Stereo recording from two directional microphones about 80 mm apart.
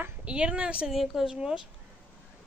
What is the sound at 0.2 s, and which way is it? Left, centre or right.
Speech, centre.